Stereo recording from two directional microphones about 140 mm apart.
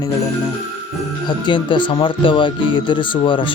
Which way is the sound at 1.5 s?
35° left (ahead or behind).